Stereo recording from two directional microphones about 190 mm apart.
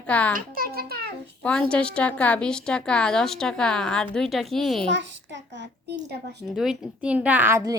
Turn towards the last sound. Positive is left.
turn(degrees=-15)  # may be behind; listen again after turning